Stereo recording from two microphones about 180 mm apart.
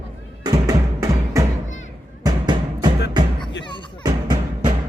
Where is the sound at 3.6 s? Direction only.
25° left (ahead or behind).